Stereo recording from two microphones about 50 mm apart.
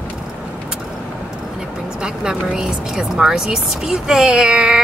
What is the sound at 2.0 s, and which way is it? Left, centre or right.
Speech, centre.